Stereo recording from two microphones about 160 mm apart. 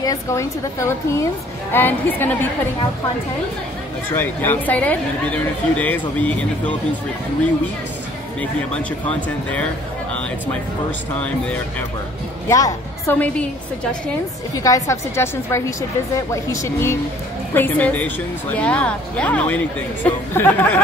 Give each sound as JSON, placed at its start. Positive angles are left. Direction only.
{"t": 0.0, "sound": "speech", "side_deg": 20}
{"t": 4.2, "sound": "speech", "side_deg": 10}
{"t": 9.0, "sound": "speech", "side_deg": 10}
{"t": 11.1, "sound": "speech", "side_deg": 10}
{"t": 12.4, "sound": "a woman's voice", "side_deg": 20}
{"t": 14.6, "sound": "a woman's voice", "side_deg": 20}